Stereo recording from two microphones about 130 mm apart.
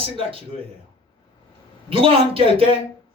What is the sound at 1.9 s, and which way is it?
Speech, 45° right (ahead or behind).